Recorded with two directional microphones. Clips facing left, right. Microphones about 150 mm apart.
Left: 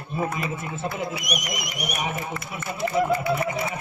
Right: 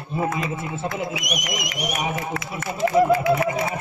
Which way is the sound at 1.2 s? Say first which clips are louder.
Right 2 dB; 90° right.